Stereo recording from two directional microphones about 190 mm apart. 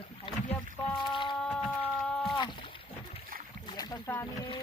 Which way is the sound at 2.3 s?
25° left (ahead or behind).